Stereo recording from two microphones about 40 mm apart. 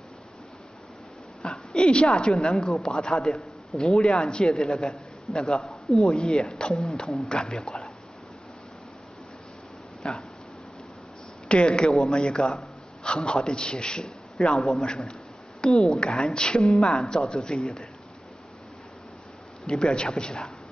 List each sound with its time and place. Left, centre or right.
1.4 s a woman's voice: left
5.6 s speech: centre
6.1 s a man's voice: left
6.5 s a man's voice: centre
7.2 s a man's voice: left
10.0 s a man's voice: left
11.4 s a man's voice: left
16.6 s a man's voice: centre
19.6 s a man's voice: centre